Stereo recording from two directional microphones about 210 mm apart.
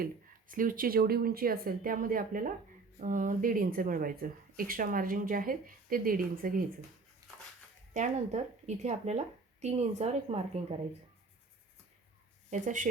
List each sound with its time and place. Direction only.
0.0 s speech: 40° right (ahead or behind)
7.2 s a sound: 15° right (ahead or behind)
7.9 s speech: 35° right (ahead or behind)
12.5 s speech: 35° right (ahead or behind)